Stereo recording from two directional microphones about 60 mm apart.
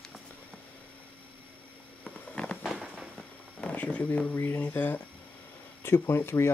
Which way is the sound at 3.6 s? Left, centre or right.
Left.